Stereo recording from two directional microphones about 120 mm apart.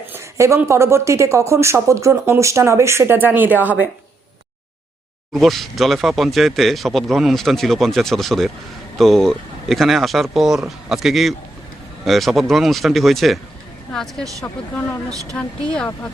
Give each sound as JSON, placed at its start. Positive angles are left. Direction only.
{"t": 0.1, "sound": "speech", "side_deg": -25}
{"t": 5.3, "sound": "speech", "side_deg": 0}
{"t": 14.4, "sound": "speech", "side_deg": 15}